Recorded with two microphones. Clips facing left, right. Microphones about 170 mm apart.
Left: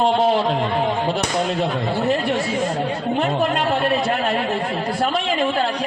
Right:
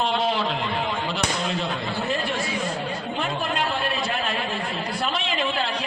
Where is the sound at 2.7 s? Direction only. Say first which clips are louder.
Left 7 dB; 55° left (ahead or behind).